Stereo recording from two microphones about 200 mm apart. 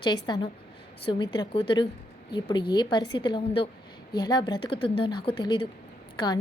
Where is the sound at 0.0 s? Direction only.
20° left (ahead or behind).